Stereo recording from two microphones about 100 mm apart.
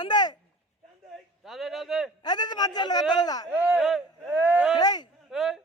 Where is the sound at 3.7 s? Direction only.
Centre (ahead or behind).